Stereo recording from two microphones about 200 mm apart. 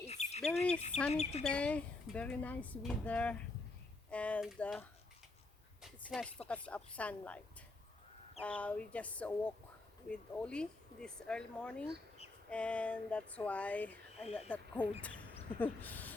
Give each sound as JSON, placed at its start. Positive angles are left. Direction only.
{"t": 0.0, "sound": "bird", "side_deg": 35}
{"t": 1.1, "sound": "speech", "side_deg": 30}
{"t": 1.5, "sound": "speech", "side_deg": 5}
{"t": 5.8, "sound": "a sound", "side_deg": 0}
{"t": 6.5, "sound": "speech", "side_deg": 5}